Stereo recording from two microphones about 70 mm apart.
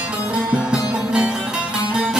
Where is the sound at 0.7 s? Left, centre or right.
Centre.